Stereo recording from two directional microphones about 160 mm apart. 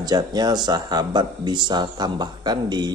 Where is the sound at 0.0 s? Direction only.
25° right (ahead or behind).